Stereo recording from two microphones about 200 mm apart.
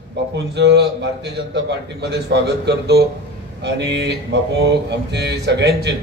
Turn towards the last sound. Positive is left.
turn(degrees=-55)  # may be behind; listen again after turning